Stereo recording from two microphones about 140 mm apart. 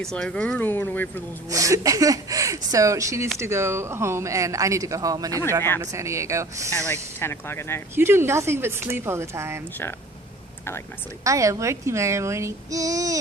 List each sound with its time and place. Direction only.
0.0 s speech: 5° left (ahead or behind)
1.5 s speech: 25° right (ahead or behind)
6.8 s speech: 15° left (ahead or behind)
7.9 s speech: 15° right (ahead or behind)
11.2 s speech: 25° right (ahead or behind)